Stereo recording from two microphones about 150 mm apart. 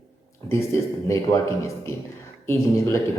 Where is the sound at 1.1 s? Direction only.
20° left (ahead or behind).